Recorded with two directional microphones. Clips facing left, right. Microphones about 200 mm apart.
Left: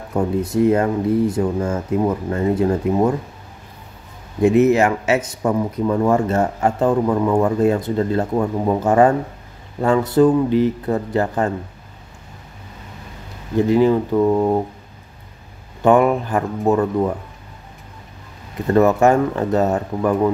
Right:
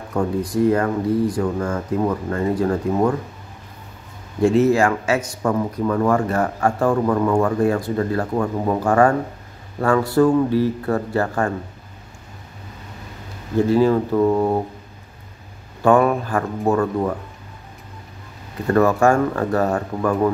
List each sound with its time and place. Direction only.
0.1 s speech: 25° left (ahead or behind)
4.4 s speech: 20° left (ahead or behind)
7.4 s speech: 20° left (ahead or behind)
13.6 s speech: 20° left (ahead or behind)
14.1 s speech: centre (ahead or behind)
15.8 s speech: 20° left (ahead or behind)
18.7 s speech: 20° left (ahead or behind)